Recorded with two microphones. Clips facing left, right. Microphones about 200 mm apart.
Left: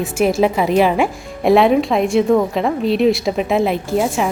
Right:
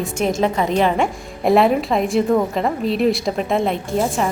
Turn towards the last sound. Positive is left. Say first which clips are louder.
# left 2 dB
turn(degrees=5)  # may be behind; listen again after turning